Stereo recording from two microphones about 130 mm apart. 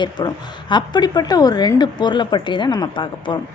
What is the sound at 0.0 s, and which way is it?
A woman's voice, 35° left (ahead or behind).